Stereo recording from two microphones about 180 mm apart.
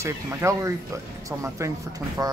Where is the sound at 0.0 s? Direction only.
15° right (ahead or behind).